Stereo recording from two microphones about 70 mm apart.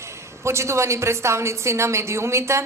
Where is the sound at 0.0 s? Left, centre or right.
Right.